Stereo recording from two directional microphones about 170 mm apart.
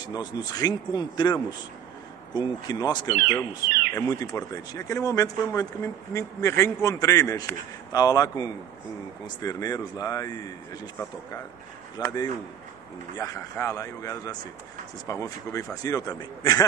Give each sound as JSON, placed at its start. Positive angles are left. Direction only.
{"t": 0.0, "sound": "a man's voice", "side_deg": 25}
{"t": 3.6, "sound": "bird", "side_deg": -60}
{"t": 3.9, "sound": "a man's voice", "side_deg": 20}
{"t": 12.0, "sound": "a man's voice", "side_deg": 25}
{"t": 13.2, "sound": "a man's voice", "side_deg": 15}